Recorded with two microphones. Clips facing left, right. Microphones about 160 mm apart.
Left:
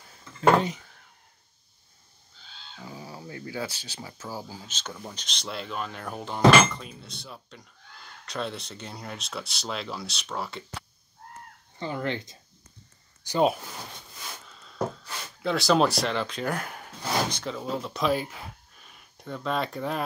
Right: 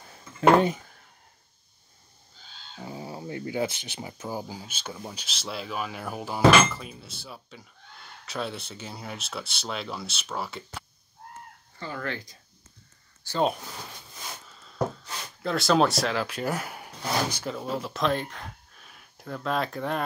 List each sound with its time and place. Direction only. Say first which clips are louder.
2.8 s speech: right 4 dB; 25° right (ahead or behind); by 10.8 s centre (ahead or behind)
11.8 s speech: left 3 dB; 20° left (ahead or behind)
15.4 s speech: even; centre (ahead or behind)